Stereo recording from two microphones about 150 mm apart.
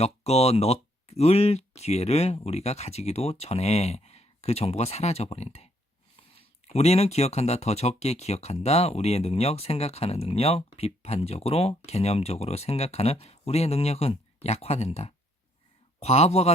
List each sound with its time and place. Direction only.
0.0 s speech: 45° left (ahead or behind)
6.7 s speech: 45° left (ahead or behind)